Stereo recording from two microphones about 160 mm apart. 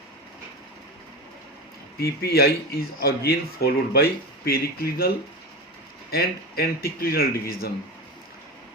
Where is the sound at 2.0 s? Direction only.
80° left.